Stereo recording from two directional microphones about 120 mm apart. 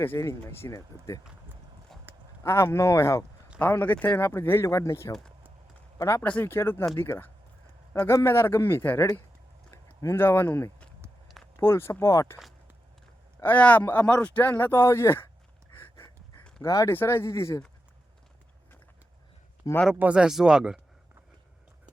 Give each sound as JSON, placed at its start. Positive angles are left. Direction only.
{"t": 0.0, "sound": "speech", "side_deg": 20}
{"t": 1.9, "sound": "clip-clop", "side_deg": 5}
{"t": 2.4, "sound": "speech", "side_deg": 20}
{"t": 6.2, "sound": "speech", "side_deg": 15}
{"t": 11.3, "sound": "a sound", "side_deg": 0}
{"t": 11.6, "sound": "speech", "side_deg": 20}
{"t": 13.4, "sound": "speech", "side_deg": 15}
{"t": 15.7, "sound": "dog", "side_deg": 20}
{"t": 16.6, "sound": "speech", "side_deg": 25}
{"t": 19.9, "sound": "speech", "side_deg": -10}